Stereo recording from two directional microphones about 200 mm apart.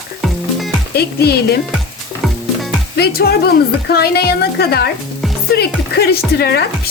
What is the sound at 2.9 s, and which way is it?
Speech, 50° left (ahead or behind).